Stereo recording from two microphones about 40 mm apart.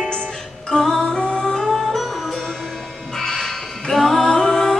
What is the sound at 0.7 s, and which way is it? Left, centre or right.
Music, centre.